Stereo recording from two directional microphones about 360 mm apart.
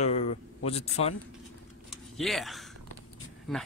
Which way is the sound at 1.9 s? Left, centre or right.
Centre.